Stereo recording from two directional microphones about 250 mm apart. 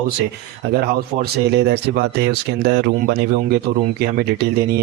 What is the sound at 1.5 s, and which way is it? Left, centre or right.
Speech, right.